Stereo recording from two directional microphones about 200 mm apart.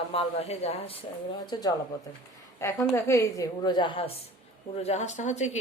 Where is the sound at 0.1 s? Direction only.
30° left (ahead or behind).